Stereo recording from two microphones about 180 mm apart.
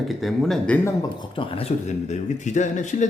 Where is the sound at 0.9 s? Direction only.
25° left (ahead or behind).